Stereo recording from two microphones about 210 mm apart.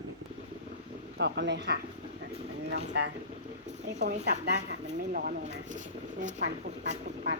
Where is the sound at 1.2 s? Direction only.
55° right (ahead or behind).